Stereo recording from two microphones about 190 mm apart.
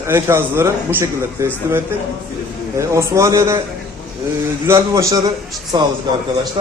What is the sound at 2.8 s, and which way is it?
Speech, 15° right (ahead or behind).